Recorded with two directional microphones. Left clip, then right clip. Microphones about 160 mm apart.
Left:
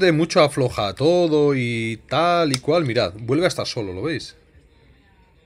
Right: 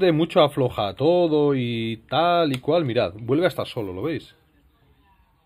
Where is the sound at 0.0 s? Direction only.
10° left (ahead or behind).